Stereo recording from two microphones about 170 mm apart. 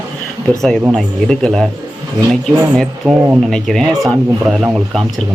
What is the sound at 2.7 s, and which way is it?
Speech, centre (ahead or behind).